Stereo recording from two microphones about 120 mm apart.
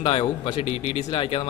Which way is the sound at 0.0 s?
55° left (ahead or behind).